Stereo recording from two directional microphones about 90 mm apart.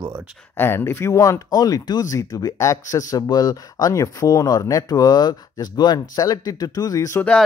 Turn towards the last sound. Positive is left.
turn(degrees=35)  # may be behind; listen again after turning